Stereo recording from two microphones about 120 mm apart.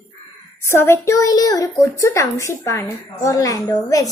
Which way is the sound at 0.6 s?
20° left (ahead or behind).